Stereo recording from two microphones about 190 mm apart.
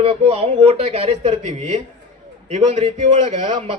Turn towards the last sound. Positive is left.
turn(degrees=-30)  # may be behind; listen again after turning